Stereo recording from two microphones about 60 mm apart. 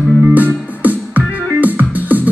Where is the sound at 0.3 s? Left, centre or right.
Right.